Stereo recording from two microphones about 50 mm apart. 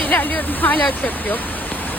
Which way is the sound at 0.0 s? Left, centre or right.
Left.